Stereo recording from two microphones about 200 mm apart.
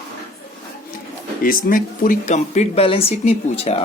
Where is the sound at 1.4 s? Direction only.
45° left (ahead or behind).